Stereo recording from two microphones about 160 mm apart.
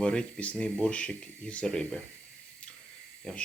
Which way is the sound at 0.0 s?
5° left (ahead or behind).